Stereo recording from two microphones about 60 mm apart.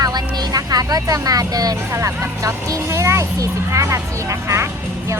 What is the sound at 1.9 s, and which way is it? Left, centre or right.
Speech, right.